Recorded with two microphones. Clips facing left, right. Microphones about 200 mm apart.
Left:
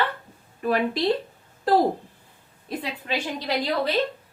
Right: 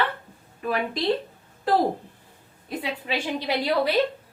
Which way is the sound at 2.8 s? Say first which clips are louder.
Right 1 dB; 10° right (ahead or behind).